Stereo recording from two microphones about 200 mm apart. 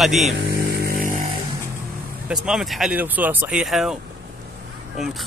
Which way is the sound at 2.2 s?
5° right (ahead or behind).